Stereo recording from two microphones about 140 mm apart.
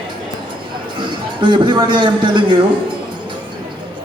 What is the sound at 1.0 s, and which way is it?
A man's voice, 35° right (ahead or behind).